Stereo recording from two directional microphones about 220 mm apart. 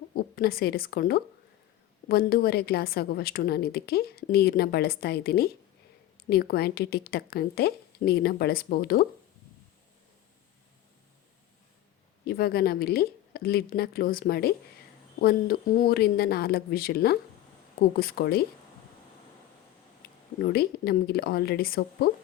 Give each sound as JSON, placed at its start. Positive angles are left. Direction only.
{"t": 0.2, "sound": "a woman's voice", "side_deg": 45}
{"t": 12.2, "sound": "a woman's voice", "side_deg": 45}
{"t": 20.4, "sound": "a woman's voice", "side_deg": 45}